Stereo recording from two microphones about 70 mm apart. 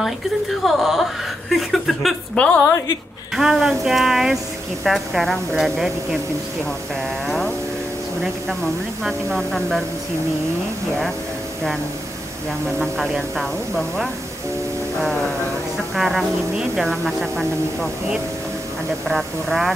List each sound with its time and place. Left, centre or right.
0.0 s speech: centre
2.3 s a woman's voice: centre
2.6 s a woman's voice: left
3.3 s speech: centre
7.2 s a sound: centre
9.0 s speech: centre
12.7 s speech: centre
15.9 s speech: centre
19.0 s speech: centre